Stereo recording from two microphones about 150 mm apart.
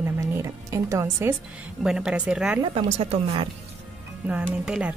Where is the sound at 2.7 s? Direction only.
40° right (ahead or behind).